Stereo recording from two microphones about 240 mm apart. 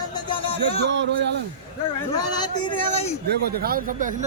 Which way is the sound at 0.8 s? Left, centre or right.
Right.